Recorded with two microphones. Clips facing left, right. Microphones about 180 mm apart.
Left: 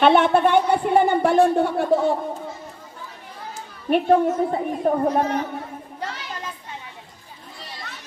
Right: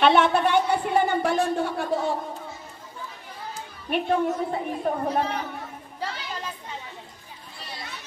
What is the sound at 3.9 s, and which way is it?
A child's voice, 45° left (ahead or behind).